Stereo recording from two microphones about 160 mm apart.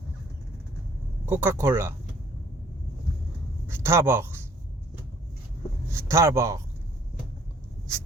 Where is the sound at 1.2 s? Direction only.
15° right (ahead or behind).